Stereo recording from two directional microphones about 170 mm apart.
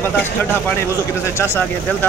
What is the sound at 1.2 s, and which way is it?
Speech, 15° left (ahead or behind).